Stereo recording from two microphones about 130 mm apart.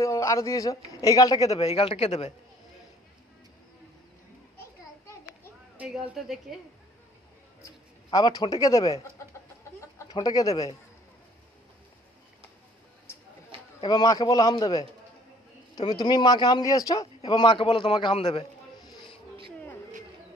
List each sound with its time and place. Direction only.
0.0 s a man's voice: 25° left (ahead or behind)
1.4 s a man's voice: 55° left (ahead or behind)
5.8 s a woman's voice: 5° right (ahead or behind)
7.6 s speech: 30° left (ahead or behind)
10.1 s speech: 30° left (ahead or behind)
13.8 s speech: 30° left (ahead or behind)
17.3 s a man's voice: 40° left (ahead or behind)